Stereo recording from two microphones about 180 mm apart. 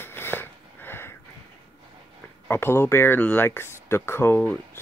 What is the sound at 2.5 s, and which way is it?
Speech, 15° left (ahead or behind).